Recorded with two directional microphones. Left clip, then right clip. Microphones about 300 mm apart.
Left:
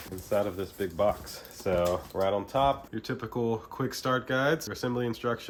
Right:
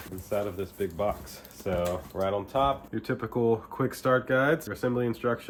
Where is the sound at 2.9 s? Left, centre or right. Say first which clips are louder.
Right 3 dB; centre.